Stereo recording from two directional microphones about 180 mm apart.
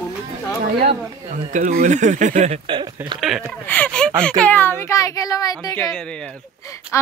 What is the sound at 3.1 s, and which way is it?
Speech, centre (ahead or behind).